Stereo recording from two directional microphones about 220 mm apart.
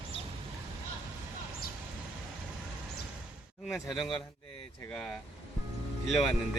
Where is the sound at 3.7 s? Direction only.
Centre (ahead or behind).